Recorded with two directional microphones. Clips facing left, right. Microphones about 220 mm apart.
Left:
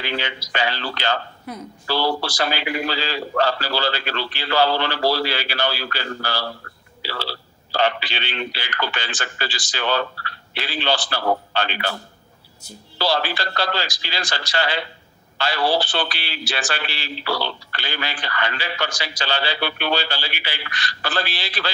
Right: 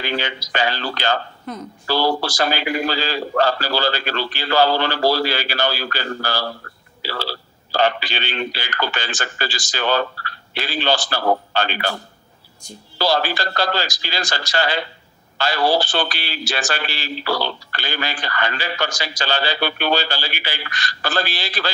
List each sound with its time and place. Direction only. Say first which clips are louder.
0.0 s a man's voice: right 3 dB; 45° right (ahead or behind)
1.5 s speech: right 3 dB; 10° left (ahead or behind)
1.9 s a man's voice: right 3 dB; 45° right (ahead or behind)